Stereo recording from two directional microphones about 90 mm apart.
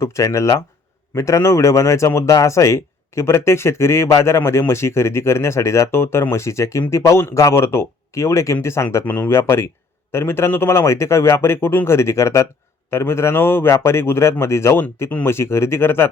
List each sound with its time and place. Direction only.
0.0 s speech: 35° left (ahead or behind)